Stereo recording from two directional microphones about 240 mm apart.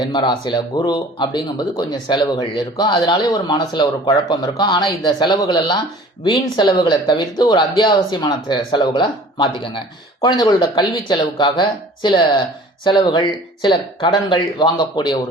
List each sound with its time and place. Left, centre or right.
0.0 s speech: centre